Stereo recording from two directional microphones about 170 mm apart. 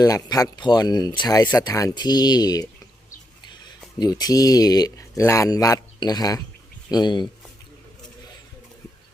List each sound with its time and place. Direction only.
0.0 s speech: 20° left (ahead or behind)
3.9 s speech: 25° left (ahead or behind)